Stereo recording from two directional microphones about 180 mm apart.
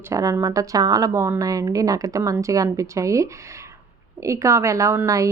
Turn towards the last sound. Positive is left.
turn(degrees=-15)  # may be behind; listen again after turning